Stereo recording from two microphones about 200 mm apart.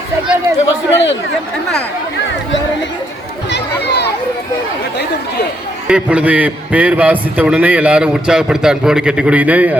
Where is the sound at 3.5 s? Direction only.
55° left (ahead or behind).